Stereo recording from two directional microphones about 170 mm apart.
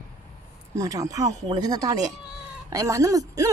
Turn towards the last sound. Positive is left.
turn(degrees=-20)  # may be behind; listen again after turning